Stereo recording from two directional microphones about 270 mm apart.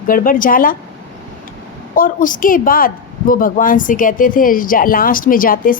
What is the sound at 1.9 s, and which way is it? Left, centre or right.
A woman's voice, left.